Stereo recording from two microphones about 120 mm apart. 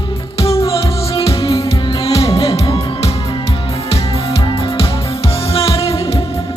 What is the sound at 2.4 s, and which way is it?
Music, 35° left (ahead or behind).